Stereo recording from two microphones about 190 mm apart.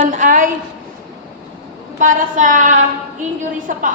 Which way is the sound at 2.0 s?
45° right (ahead or behind).